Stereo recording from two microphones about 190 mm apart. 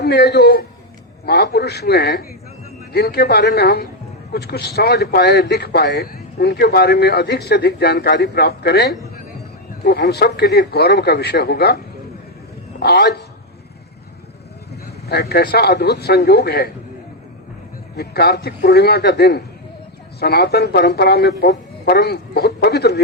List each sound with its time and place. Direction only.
0.0 s speech: 60° left (ahead or behind)
12.8 s speech: 60° left (ahead or behind)
15.1 s speech: 60° left (ahead or behind)
17.9 s speech: 60° left (ahead or behind)